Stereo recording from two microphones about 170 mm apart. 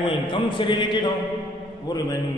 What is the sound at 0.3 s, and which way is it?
Speech, 30° left (ahead or behind).